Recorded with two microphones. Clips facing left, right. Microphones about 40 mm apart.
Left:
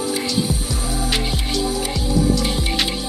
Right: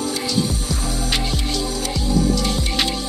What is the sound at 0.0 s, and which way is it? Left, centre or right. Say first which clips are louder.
Music: even; centre.